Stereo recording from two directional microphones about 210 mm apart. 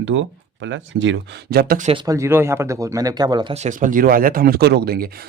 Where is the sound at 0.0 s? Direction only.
65° right (ahead or behind); by 1.9 s 45° right (ahead or behind).